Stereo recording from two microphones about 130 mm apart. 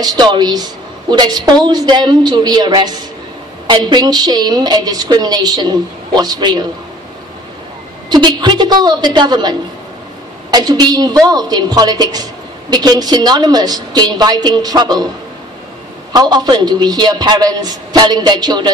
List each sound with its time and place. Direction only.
0.0 s a woman's voice: 30° right (ahead or behind)
8.1 s a woman's voice: 35° right (ahead or behind)
16.1 s a woman's voice: 30° right (ahead or behind)